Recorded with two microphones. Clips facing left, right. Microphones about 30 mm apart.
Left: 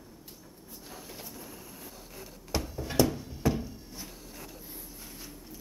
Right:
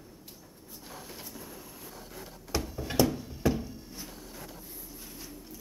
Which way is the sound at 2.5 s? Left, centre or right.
Centre.